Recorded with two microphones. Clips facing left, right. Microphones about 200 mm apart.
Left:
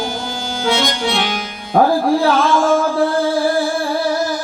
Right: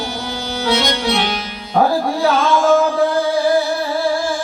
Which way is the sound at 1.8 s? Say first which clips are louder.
Left 2 dB; 50° left (ahead or behind).